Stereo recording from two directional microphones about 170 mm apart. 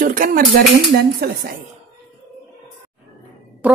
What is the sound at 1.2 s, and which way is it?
Speech, 70° right (ahead or behind).